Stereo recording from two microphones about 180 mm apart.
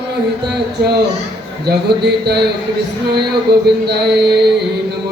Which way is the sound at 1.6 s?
65° right (ahead or behind).